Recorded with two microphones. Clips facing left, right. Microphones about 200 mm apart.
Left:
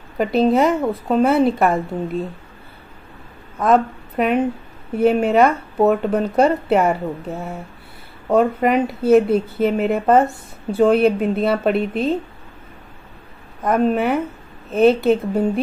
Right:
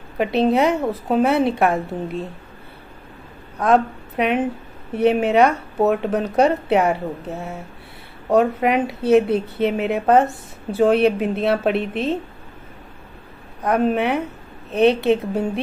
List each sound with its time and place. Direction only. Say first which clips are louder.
0.2 s a woman's voice: left 2 dB; centre (ahead or behind)
3.5 s a woman's voice: left 1 dB; centre (ahead or behind)
13.6 s a woman's voice: left 1 dB; centre (ahead or behind)